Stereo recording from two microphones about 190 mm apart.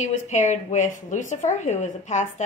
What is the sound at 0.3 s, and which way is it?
A woman's voice, 40° left (ahead or behind).